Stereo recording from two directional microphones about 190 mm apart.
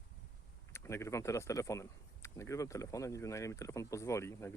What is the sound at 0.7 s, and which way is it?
Speech, 15° left (ahead or behind).